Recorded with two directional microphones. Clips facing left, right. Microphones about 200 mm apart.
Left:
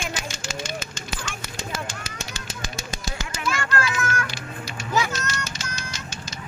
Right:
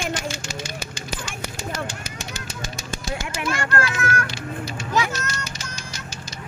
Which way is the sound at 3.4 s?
55° right (ahead or behind).